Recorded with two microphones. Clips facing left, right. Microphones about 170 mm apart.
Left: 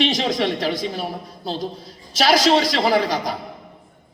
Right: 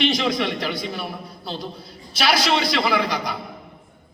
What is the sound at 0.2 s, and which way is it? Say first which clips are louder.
A man's voice: left 2 dB; 40° left (ahead or behind).